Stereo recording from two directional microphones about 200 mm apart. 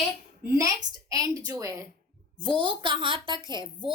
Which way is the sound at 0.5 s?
15° right (ahead or behind).